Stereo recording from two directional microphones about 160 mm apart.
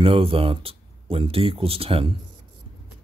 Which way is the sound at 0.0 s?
35° right (ahead or behind).